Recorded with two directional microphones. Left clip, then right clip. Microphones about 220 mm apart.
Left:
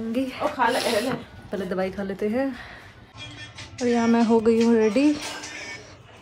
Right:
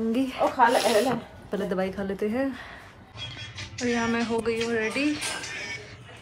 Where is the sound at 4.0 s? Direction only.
25° left (ahead or behind).